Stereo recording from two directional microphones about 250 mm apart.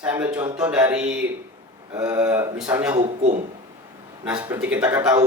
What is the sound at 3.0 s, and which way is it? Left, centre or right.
Speech, right.